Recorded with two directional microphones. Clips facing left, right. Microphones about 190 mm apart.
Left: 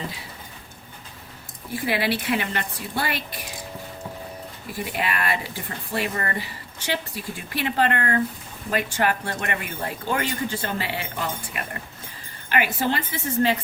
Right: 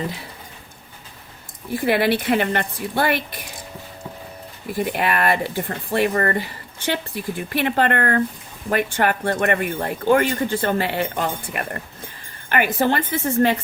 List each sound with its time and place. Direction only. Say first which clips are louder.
1.9 s speech: right 6 dB; 55° right (ahead or behind)
4.9 s speech: right 5 dB; 55° right (ahead or behind)